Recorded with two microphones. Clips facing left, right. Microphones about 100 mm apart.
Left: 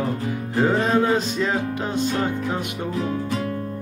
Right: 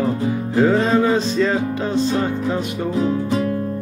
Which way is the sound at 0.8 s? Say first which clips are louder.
Right 3 dB; 15° left (ahead or behind).